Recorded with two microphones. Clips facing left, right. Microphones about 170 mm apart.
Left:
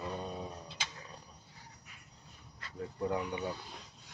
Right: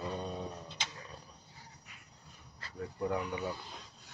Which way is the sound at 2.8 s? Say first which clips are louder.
Even; 20° left (ahead or behind).